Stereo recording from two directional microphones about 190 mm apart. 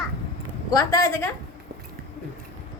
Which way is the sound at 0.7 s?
20° left (ahead or behind).